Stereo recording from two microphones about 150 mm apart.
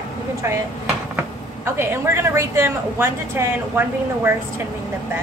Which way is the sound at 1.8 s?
15° right (ahead or behind).